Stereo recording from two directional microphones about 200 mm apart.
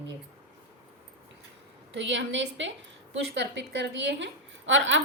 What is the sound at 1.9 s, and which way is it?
A woman's voice, 65° right (ahead or behind).